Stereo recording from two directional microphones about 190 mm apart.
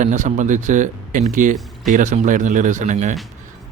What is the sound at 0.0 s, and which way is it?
A man's voice, 40° right (ahead or behind).